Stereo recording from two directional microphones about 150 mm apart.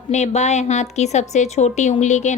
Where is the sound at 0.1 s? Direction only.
50° left (ahead or behind).